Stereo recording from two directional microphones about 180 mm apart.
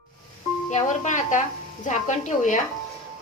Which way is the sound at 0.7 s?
40° left (ahead or behind).